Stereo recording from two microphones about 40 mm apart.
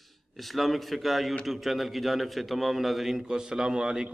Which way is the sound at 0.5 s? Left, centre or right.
Centre.